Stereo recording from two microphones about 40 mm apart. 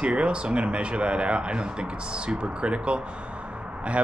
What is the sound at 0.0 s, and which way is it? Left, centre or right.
Speech, right.